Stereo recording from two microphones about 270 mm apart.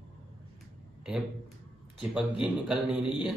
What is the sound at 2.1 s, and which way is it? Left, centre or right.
Speech, centre.